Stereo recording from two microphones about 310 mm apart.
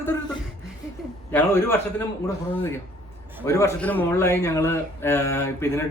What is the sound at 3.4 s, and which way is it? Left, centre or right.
Speech, centre.